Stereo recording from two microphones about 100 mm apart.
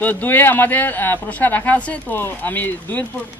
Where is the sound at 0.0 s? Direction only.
20° left (ahead or behind).